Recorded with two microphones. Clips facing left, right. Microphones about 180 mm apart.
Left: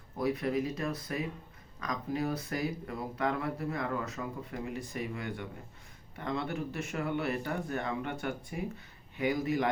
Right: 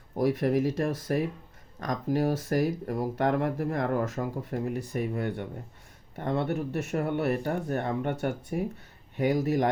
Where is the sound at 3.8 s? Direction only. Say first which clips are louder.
Right 7 dB; 55° right (ahead or behind).